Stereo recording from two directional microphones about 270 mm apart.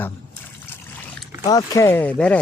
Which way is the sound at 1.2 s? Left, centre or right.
Centre.